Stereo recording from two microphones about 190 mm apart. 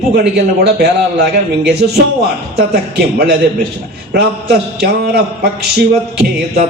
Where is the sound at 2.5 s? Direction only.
55° right (ahead or behind).